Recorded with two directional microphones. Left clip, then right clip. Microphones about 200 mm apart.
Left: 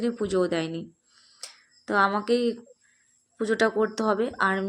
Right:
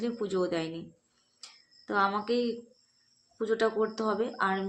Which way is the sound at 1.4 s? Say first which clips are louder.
Left 6 dB; 35° left (ahead or behind).